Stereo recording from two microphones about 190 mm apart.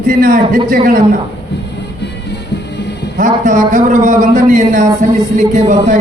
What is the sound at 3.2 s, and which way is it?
A man's voice, 45° right (ahead or behind).